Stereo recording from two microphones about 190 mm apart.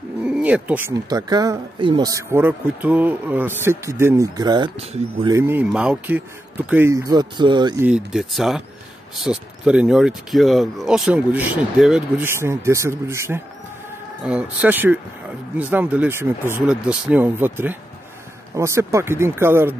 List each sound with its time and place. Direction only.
0.2 s a sound: 5° right (ahead or behind)
1.0 s speech: 20° right (ahead or behind)
7.8 s speech: 5° right (ahead or behind)